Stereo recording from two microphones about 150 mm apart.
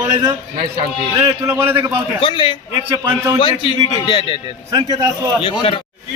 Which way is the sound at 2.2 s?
30° left (ahead or behind).